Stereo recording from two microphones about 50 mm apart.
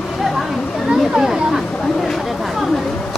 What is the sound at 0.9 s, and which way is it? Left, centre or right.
Speech, centre.